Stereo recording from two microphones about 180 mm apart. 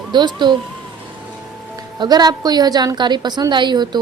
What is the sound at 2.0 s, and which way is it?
A woman's voice, 20° right (ahead or behind).